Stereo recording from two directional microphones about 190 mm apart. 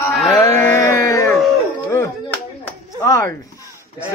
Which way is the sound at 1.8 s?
15° left (ahead or behind).